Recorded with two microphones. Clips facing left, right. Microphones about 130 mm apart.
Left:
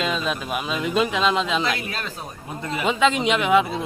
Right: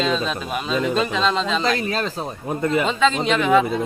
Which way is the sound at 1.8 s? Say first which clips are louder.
Right 7 dB; 35° right (ahead or behind).